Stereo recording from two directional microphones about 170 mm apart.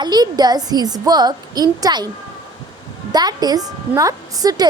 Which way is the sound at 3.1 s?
25° right (ahead or behind).